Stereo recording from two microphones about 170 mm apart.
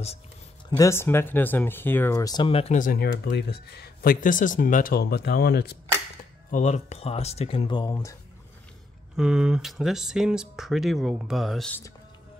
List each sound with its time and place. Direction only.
0.7 s speech: 20° left (ahead or behind); by 2.8 s 35° left (ahead or behind)
2.8 s speech: 65° left (ahead or behind)
6.5 s speech: 45° left (ahead or behind); by 8.2 s 20° left (ahead or behind)
9.1 s speech: 5° right (ahead or behind)